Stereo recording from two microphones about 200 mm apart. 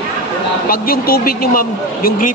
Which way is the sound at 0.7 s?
50° left (ahead or behind).